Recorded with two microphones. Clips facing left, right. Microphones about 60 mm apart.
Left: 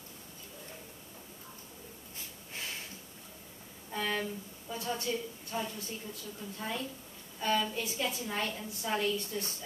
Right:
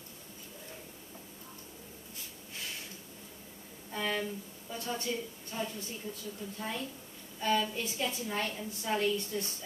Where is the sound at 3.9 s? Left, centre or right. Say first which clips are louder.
Even; centre.